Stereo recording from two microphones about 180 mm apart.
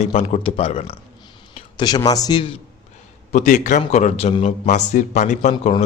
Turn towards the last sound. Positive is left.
turn(degrees=40)  # may be behind; listen again after turning